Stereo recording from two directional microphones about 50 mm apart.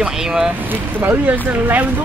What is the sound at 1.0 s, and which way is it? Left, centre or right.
Speech, right.